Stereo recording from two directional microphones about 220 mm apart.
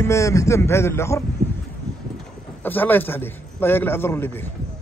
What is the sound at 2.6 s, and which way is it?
Speech, 10° left (ahead or behind).